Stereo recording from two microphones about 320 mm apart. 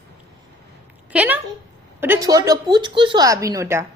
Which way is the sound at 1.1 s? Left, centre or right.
Centre.